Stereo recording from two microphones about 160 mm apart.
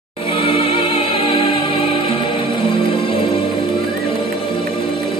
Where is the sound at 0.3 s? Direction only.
35° left (ahead or behind).